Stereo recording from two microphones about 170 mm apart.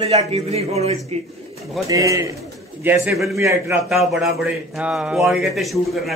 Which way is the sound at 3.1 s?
Centre (ahead or behind).